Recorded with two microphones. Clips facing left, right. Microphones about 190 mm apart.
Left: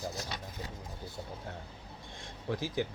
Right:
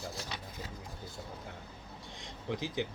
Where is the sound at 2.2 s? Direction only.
20° right (ahead or behind).